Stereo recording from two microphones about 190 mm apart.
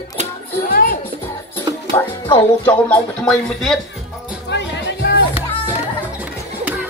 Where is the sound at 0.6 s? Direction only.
50° left (ahead or behind).